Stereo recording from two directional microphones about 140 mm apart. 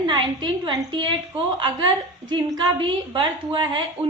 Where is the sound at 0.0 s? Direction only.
30° right (ahead or behind).